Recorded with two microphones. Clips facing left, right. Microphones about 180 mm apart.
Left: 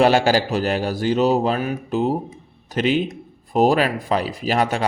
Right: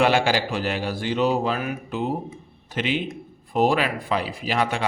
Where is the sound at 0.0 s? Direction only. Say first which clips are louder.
Left 4 dB; 40° left (ahead or behind).